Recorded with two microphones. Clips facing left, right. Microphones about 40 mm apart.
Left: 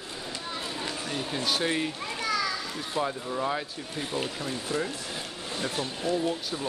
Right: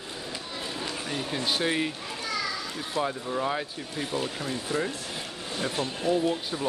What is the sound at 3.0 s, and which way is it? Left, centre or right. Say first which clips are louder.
Speech: right 1 dB; centre.